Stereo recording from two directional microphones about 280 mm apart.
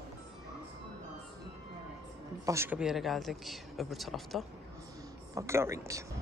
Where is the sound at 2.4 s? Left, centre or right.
Centre.